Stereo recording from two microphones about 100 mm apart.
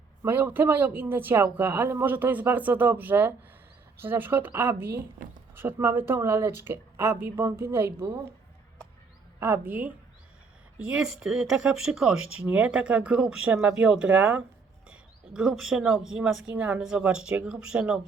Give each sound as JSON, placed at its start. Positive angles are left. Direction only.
{"t": 0.3, "sound": "speech", "side_deg": -20}
{"t": 9.4, "sound": "speech", "side_deg": -20}